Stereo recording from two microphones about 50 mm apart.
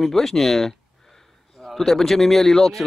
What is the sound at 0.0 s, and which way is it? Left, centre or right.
A man's voice, centre.